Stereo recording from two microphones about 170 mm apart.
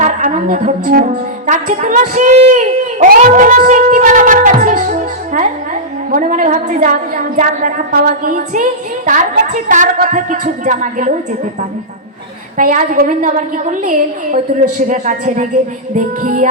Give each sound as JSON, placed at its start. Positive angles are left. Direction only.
{"t": 0.0, "sound": "music", "side_deg": -45}
{"t": 1.5, "sound": "a woman's voice", "side_deg": -45}
{"t": 12.5, "sound": "a woman's voice", "side_deg": -50}